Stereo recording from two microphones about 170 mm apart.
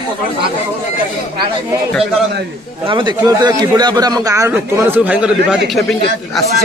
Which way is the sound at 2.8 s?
25° right (ahead or behind).